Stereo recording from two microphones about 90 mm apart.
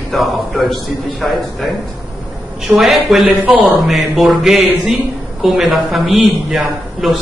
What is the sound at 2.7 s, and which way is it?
Speech, centre (ahead or behind).